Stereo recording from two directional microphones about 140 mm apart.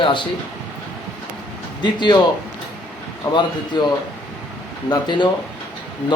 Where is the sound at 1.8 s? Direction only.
30° left (ahead or behind).